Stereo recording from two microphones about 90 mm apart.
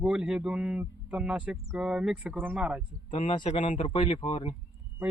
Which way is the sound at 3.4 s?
80° left.